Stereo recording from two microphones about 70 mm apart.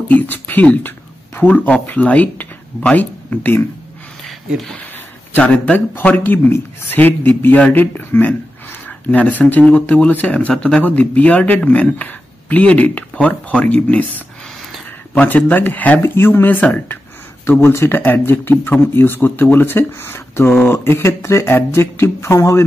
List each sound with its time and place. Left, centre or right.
0.1 s speech: left
5.4 s speech: centre
15.1 s speech: left